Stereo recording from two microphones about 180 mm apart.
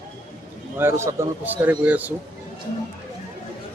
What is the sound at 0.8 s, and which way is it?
A man's voice, 15° right (ahead or behind).